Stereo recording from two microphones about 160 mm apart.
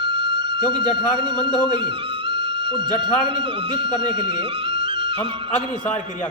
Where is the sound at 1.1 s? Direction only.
30° right (ahead or behind).